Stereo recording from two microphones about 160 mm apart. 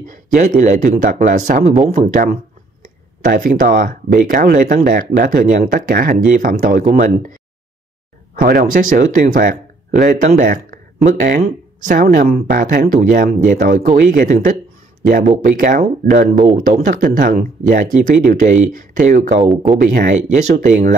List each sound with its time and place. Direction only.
0.0 s speech: 55° right (ahead or behind)
8.4 s speech: 60° right (ahead or behind)
12.5 s speech: 65° right (ahead or behind); by 19.2 s 50° right (ahead or behind)
19.5 s speech: 5° right (ahead or behind)
19.8 s speech: 60° right (ahead or behind)